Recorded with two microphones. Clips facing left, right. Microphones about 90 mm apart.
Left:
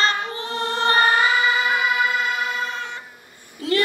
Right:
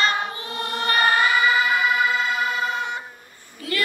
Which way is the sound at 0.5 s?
30° left (ahead or behind).